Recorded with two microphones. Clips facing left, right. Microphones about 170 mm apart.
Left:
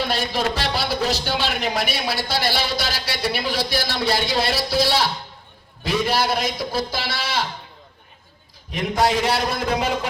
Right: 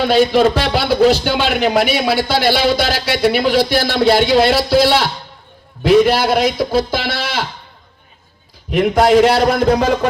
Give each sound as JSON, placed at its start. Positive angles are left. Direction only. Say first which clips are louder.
{"t": 0.0, "sound": "a man's voice", "louder": "right 11 dB", "side_deg": -60}
{"t": 8.7, "sound": "a man's voice", "louder": "right 9 dB", "side_deg": -70}